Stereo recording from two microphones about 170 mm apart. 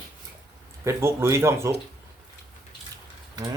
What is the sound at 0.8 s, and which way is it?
Speech, 15° right (ahead or behind).